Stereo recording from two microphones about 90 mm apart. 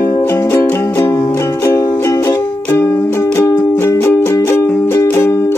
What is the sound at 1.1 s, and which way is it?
Music, 40° left (ahead or behind).